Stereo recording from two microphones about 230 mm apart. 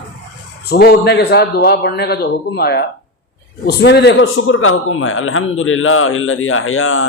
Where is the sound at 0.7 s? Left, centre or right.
Left.